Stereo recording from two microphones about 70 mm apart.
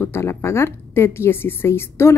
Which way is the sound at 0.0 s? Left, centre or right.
Left.